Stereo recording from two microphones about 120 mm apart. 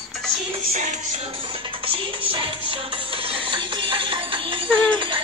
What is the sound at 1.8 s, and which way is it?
Music, 45° right (ahead or behind).